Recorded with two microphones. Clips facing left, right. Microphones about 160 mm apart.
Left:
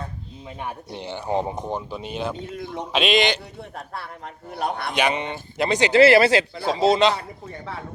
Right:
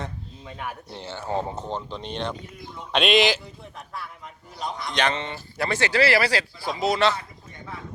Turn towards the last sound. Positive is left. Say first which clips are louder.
# left 4 dB
turn(degrees=25)  # may be behind; listen again after turning